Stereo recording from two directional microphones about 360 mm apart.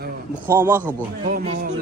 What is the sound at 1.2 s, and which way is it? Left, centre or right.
Speech, right.